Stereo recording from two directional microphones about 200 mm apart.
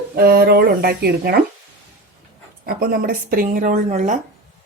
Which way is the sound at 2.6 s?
50° right (ahead or behind).